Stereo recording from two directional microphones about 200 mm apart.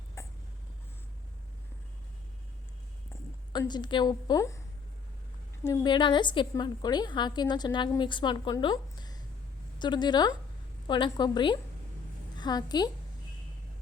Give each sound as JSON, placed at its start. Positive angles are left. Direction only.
{"t": 0.2, "sound": "a sound", "side_deg": 15}
{"t": 3.1, "sound": "a woman's voice", "side_deg": 20}
{"t": 5.6, "sound": "a woman's voice", "side_deg": 20}